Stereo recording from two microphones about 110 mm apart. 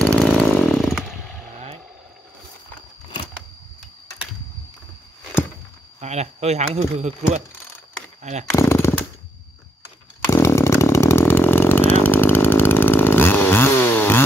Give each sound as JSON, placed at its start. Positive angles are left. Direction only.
{"t": 0.0, "sound": "chainsaw", "side_deg": 5}
{"t": 5.9, "sound": "speech", "side_deg": -85}
{"t": 8.5, "sound": "jackhammer", "side_deg": 25}
{"t": 10.2, "sound": "chainsaw", "side_deg": 25}